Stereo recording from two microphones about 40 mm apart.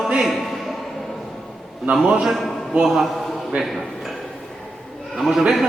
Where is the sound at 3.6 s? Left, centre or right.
Centre.